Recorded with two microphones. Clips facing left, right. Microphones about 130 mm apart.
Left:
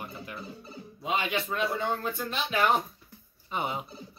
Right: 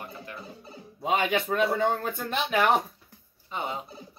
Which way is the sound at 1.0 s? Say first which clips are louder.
Right 4 dB; 50° right (ahead or behind).